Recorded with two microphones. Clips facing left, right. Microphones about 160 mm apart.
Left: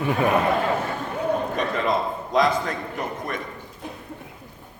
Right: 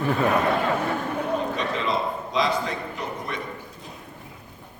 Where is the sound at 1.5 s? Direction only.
50° left (ahead or behind).